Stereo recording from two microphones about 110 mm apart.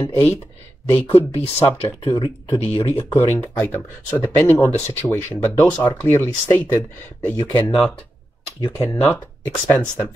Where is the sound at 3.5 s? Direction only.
20° left (ahead or behind).